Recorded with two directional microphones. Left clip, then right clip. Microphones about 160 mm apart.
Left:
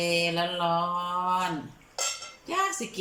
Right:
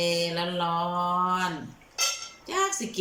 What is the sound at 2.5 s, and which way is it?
Cutlery, 10° left (ahead or behind).